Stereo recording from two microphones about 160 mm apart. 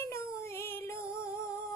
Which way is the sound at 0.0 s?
15° left (ahead or behind).